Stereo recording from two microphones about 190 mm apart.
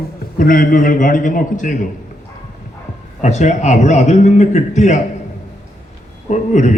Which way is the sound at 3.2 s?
40° left (ahead or behind).